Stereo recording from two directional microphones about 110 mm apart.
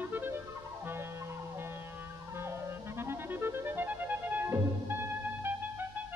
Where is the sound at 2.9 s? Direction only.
20° right (ahead or behind).